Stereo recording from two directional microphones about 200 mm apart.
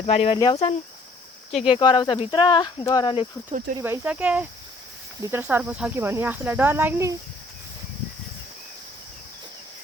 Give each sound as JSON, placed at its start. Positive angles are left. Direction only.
{"t": 0.0, "sound": "speech", "side_deg": 30}
{"t": 3.8, "sound": "speech", "side_deg": -15}